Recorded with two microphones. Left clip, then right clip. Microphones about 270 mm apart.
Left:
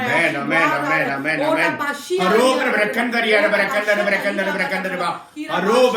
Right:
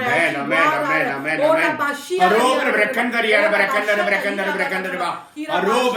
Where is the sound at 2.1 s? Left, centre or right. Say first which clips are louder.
Right 4 dB; centre.